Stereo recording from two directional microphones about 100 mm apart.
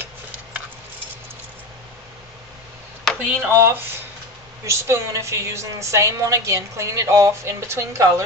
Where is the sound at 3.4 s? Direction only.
25° right (ahead or behind).